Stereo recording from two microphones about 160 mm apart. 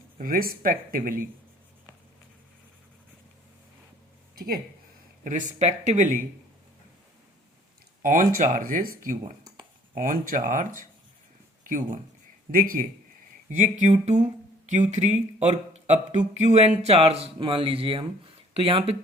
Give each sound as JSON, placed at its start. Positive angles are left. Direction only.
{"t": 0.2, "sound": "speech", "side_deg": -65}
{"t": 4.4, "sound": "speech", "side_deg": -70}
{"t": 5.2, "sound": "speech", "side_deg": -50}
{"t": 8.0, "sound": "speech", "side_deg": -55}